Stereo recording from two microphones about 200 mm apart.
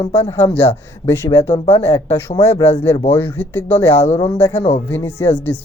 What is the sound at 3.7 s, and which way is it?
Speech, 30° left (ahead or behind).